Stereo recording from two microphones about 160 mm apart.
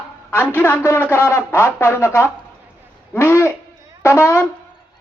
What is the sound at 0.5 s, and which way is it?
Speech, 10° left (ahead or behind).